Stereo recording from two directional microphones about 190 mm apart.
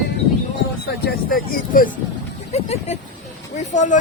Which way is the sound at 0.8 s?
50° left (ahead or behind).